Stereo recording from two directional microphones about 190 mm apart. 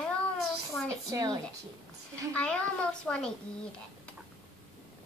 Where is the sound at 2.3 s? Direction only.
5° left (ahead or behind).